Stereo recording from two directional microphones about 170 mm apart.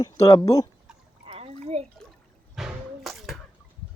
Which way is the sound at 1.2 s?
35° right (ahead or behind).